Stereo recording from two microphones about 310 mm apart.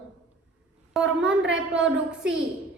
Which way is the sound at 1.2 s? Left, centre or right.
Right.